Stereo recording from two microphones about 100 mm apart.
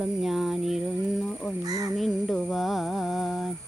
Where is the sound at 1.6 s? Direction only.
35° right (ahead or behind).